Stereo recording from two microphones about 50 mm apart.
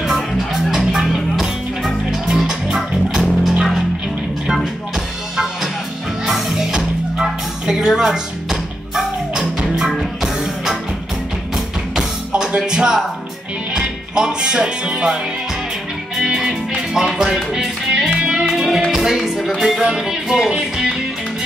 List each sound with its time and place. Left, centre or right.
0.7 s music: centre
12.3 s music: centre
13.7 s speech: centre
16.2 s music: centre